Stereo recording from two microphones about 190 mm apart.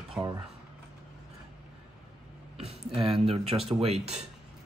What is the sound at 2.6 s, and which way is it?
Speech, 30° right (ahead or behind).